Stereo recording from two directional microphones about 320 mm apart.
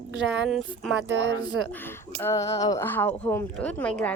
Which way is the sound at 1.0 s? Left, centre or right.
Right.